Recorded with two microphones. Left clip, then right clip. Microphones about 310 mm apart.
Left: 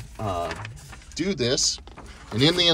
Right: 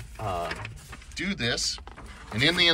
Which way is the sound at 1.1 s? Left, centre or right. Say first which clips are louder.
Left 4 dB; centre.